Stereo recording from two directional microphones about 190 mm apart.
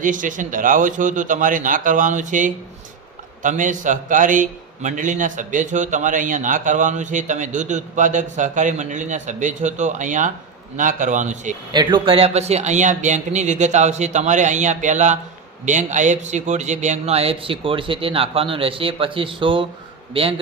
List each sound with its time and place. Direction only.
0.0 s a man's voice: 45° right (ahead or behind)
11.7 s a man's voice: 25° right (ahead or behind)